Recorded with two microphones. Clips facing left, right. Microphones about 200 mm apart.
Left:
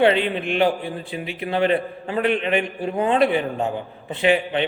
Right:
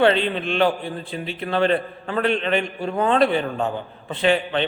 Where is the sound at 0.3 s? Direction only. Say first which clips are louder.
Even; 15° left (ahead or behind).